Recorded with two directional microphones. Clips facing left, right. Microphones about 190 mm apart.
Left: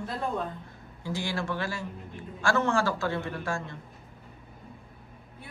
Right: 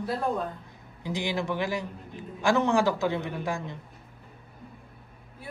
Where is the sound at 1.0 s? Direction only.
20° right (ahead or behind).